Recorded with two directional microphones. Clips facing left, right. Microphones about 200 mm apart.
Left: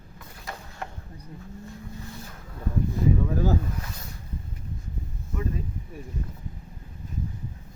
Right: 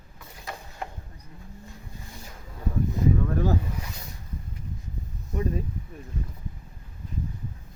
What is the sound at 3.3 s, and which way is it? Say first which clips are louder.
Speech: even; 5° left (ahead or behind).